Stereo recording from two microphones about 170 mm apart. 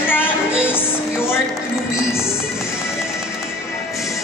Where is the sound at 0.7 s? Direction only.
15° left (ahead or behind).